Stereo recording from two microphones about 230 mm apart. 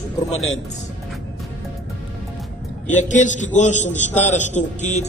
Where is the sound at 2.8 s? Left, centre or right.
Left.